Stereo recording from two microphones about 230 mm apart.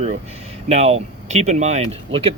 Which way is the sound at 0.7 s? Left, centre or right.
Right.